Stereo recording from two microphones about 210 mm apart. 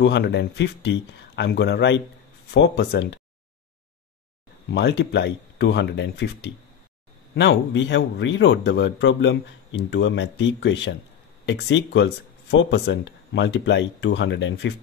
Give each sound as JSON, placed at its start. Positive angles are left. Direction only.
{"t": 0.0, "sound": "speech", "side_deg": 55}
{"t": 4.6, "sound": "speech", "side_deg": 55}